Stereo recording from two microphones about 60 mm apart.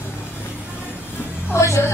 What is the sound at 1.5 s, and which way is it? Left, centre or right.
Music, left.